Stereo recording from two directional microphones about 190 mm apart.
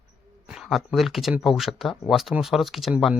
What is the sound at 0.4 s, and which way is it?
Speech, centre (ahead or behind).